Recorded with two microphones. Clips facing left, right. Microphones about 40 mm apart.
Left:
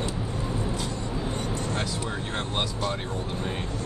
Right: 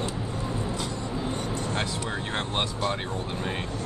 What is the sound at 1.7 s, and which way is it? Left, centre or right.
Vehicle, right.